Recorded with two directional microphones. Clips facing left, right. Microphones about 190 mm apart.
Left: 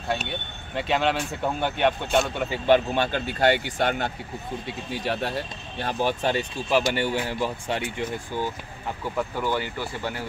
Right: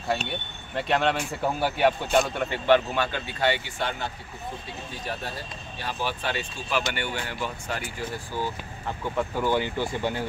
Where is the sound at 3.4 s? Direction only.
50° left (ahead or behind).